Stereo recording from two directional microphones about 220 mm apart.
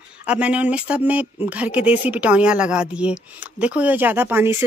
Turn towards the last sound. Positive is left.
turn(degrees=-10)  # may be behind; listen again after turning